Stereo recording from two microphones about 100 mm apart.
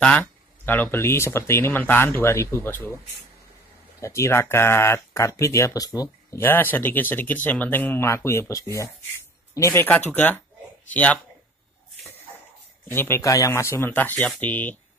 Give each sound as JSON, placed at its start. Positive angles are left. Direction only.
{"t": 0.0, "sound": "speech", "side_deg": 10}
{"t": 0.7, "sound": "speech", "side_deg": 20}
{"t": 4.0, "sound": "speech", "side_deg": 30}
{"t": 6.3, "sound": "speech", "side_deg": 20}
{"t": 10.1, "sound": "speech", "side_deg": 15}
{"t": 12.8, "sound": "speech", "side_deg": 20}
{"t": 13.2, "sound": "speech", "side_deg": 35}